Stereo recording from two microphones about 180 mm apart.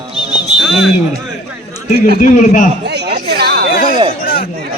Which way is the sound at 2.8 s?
65° right (ahead or behind).